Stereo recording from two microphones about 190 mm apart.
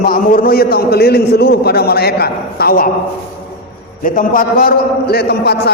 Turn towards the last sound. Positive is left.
turn(degrees=60)  # may be behind; listen again after turning